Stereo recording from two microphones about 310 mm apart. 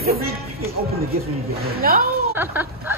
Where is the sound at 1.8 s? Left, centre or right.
Right.